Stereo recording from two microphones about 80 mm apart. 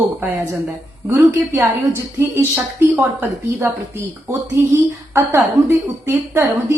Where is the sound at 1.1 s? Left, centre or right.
Right.